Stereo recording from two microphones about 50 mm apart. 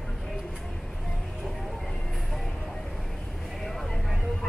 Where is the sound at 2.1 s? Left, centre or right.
Centre.